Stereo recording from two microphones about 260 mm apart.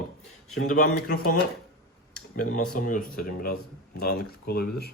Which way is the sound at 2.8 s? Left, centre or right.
Left.